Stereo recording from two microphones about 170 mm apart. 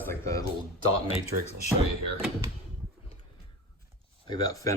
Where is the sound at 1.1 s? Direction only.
40° left (ahead or behind).